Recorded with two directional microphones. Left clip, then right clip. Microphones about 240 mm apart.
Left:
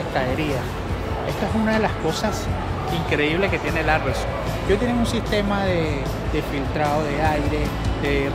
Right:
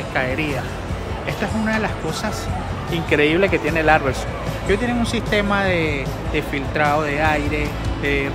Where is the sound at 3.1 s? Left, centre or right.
Centre.